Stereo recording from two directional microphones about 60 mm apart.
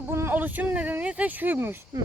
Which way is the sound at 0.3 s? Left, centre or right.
Right.